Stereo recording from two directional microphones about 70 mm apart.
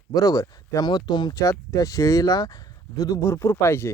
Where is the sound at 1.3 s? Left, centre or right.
Left.